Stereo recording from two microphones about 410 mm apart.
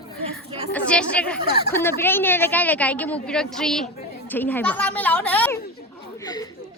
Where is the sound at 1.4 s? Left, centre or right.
Left.